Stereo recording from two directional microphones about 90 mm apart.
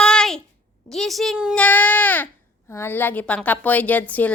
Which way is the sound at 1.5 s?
15° left (ahead or behind).